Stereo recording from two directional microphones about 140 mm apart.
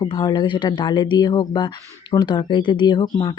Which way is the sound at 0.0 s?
30° left (ahead or behind).